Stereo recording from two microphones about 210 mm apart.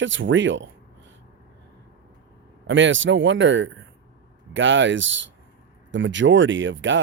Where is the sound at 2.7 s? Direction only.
60° right (ahead or behind).